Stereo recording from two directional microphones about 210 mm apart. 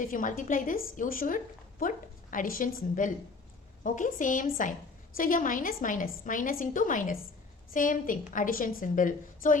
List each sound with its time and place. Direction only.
0.0 s a woman's voice: 40° left (ahead or behind)